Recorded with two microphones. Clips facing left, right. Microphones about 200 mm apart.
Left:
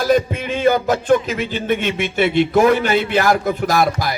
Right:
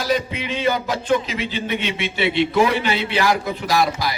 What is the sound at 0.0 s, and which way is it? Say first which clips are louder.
Music: left 6 dB; 50° left (ahead or behind).